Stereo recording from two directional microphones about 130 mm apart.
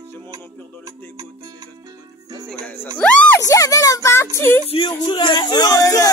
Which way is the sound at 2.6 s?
15° left (ahead or behind).